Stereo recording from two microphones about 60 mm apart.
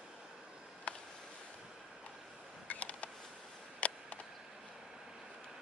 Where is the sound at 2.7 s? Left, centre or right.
Left.